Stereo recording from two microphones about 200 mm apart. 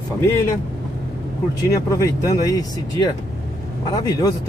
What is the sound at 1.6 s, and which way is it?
Speech, 15° left (ahead or behind).